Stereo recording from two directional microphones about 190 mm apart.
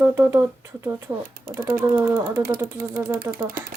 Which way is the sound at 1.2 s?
50° right (ahead or behind).